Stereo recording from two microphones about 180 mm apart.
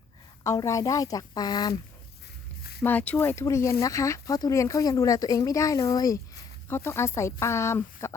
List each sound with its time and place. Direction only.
0.4 s speech: 20° left (ahead or behind)
2.8 s speech: 10° left (ahead or behind)